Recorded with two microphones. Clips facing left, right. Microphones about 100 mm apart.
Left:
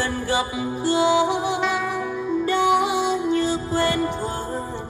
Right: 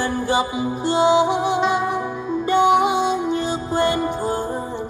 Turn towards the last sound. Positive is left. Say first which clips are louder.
# right 2 dB
turn(degrees=-15)  # may be behind; listen again after turning